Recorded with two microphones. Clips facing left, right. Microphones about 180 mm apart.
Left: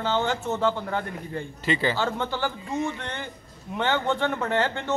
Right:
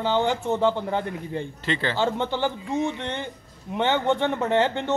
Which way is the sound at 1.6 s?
10° left (ahead or behind).